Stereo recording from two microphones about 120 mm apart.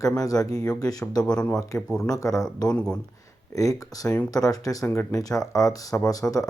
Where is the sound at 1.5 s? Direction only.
30° left (ahead or behind).